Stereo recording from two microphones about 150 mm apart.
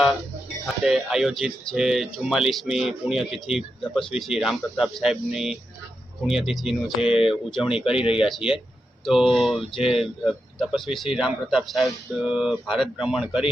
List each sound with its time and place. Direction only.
0.9 s speech: centre (ahead or behind)
7.9 s speech: 40° left (ahead or behind)
8.1 s speech: 5° right (ahead or behind)